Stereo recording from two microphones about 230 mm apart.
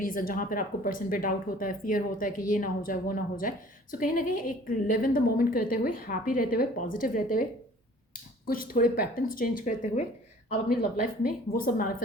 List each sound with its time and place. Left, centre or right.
0.0 s speech: left
11.5 s speech: left